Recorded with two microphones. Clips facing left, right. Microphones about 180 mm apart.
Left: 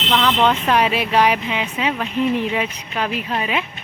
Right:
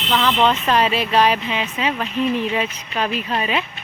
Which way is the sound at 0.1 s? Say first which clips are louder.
Even; 5° right (ahead or behind).